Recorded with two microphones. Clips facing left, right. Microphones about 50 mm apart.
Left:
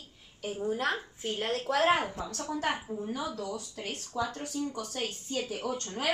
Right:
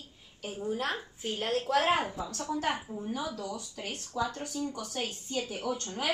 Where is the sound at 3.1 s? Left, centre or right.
Left.